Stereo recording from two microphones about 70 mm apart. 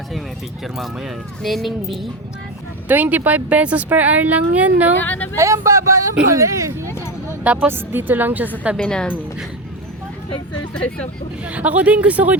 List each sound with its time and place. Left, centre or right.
0.6 s speech: centre
2.8 s speech: right
4.9 s speech: left
5.4 s speech: right
7.4 s speech: centre
7.7 s speech: right
8.8 s speech: centre
10.8 s speech: centre
11.4 s speech: right